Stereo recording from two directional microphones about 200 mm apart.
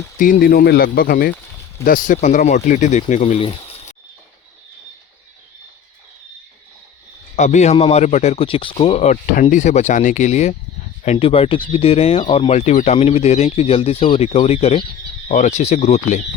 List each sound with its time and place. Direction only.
0.2 s speech: 45° left (ahead or behind); by 3.9 s 30° left (ahead or behind)
7.3 s speech: 35° left (ahead or behind)